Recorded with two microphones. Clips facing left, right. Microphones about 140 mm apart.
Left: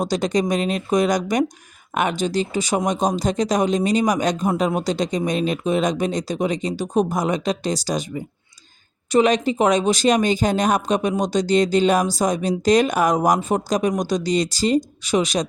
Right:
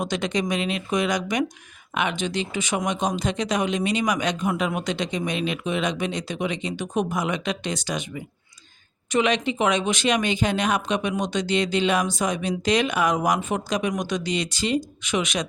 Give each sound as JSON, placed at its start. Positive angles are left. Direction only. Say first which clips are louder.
{"t": 0.0, "sound": "speech", "louder": "left 5 dB", "side_deg": 40}